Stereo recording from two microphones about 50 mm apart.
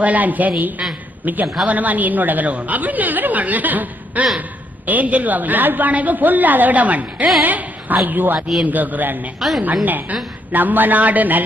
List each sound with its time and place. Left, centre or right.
0.0 s a woman's voice: right
9.4 s a woman's voice: centre
9.8 s a woman's voice: right